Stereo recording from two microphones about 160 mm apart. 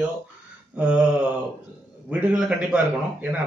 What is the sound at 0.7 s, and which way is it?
Mantra, 5° right (ahead or behind).